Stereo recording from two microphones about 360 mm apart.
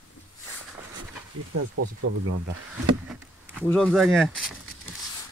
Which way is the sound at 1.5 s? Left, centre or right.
Right.